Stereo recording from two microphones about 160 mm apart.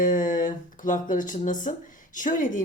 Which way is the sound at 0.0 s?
55° left (ahead or behind).